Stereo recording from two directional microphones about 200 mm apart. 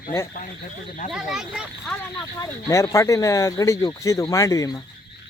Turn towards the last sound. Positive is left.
turn(degrees=15)  # may be behind; listen again after turning